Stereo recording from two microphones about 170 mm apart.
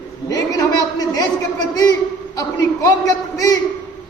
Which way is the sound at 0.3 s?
20° left (ahead or behind).